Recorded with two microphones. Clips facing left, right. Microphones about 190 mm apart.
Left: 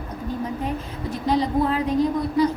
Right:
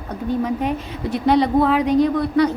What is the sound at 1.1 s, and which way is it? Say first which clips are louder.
A woman's voice: right 5 dB; 70° right (ahead or behind).